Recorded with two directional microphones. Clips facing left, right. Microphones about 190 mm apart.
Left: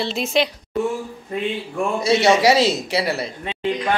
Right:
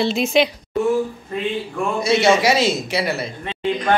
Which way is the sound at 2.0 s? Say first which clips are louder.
Left 1 dB; 35° left (ahead or behind).